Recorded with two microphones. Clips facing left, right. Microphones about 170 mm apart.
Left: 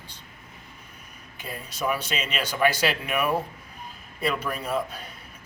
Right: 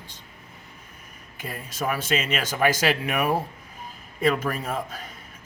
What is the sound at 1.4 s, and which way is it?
Speech, 45° right (ahead or behind).